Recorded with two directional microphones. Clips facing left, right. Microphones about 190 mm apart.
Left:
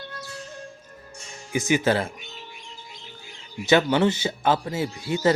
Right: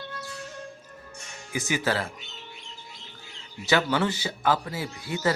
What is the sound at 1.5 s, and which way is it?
Speech, 20° left (ahead or behind).